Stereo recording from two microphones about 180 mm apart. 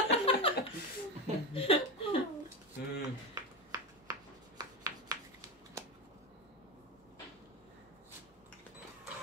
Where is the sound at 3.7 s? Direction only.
20° right (ahead or behind).